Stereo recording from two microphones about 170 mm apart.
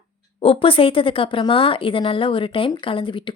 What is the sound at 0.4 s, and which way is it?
Speech, 30° left (ahead or behind).